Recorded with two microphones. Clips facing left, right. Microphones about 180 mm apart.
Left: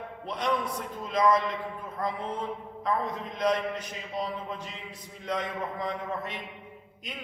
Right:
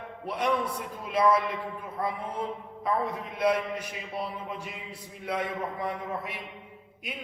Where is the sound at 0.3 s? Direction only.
10° right (ahead or behind).